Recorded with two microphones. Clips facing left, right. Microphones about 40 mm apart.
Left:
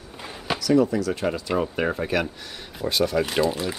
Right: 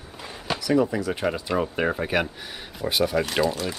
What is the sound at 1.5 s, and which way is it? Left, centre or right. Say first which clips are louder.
Speech: even; centre.